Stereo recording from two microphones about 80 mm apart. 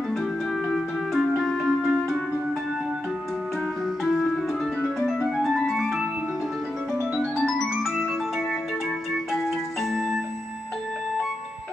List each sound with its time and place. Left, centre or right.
0.7 s music: centre
5.3 s music: centre
7.3 s music: centre
9.8 s music: centre